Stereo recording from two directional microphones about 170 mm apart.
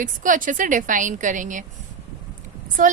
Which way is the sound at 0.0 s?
50° right (ahead or behind).